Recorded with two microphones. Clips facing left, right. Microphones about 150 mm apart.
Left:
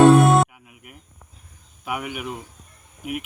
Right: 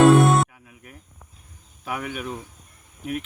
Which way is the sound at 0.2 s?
Centre (ahead or behind).